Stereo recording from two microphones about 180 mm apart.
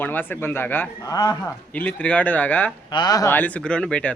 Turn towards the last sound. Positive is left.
turn(degrees=5)  # may be behind; listen again after turning